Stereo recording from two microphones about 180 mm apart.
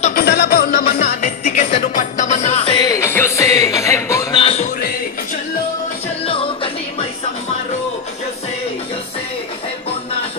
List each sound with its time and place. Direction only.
0.1 s music: 60° left (ahead or behind); by 4.4 s 15° left (ahead or behind)
4.4 s music: 35° left (ahead or behind)
6.2 s music: 30° left (ahead or behind)